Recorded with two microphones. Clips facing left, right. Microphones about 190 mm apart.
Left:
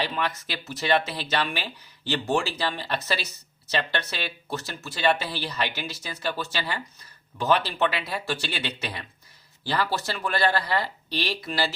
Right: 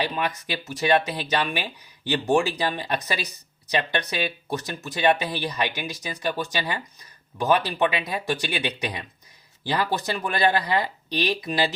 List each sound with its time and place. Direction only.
0.0 s speech: 15° right (ahead or behind)